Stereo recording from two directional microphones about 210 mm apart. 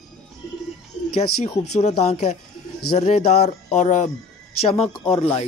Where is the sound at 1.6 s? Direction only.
30° left (ahead or behind).